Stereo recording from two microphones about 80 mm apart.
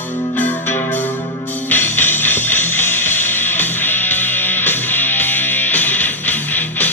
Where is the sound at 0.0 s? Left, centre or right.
Left.